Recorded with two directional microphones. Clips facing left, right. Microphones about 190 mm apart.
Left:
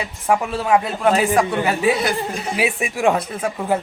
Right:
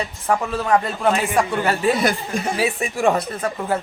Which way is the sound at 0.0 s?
10° left (ahead or behind).